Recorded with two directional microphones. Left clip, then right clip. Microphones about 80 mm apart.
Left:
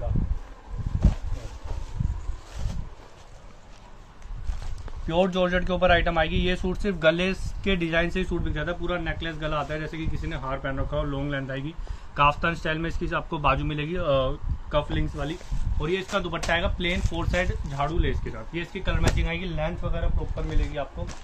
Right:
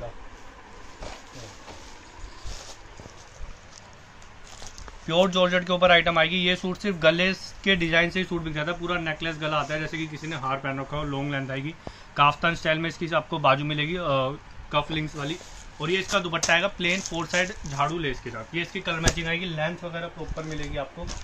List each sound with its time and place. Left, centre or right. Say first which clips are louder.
5.0 s speech: right 2 dB; centre
10.2 s speech: right 2 dB; right
12.1 s a man's voice: right 1 dB; centre
15.8 s speech: right 2 dB; centre
16.1 s speech: right 5 dB; left
18.2 s speech: right 3 dB; centre